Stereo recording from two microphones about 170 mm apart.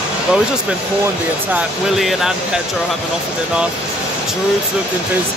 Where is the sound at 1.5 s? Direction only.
5° right (ahead or behind).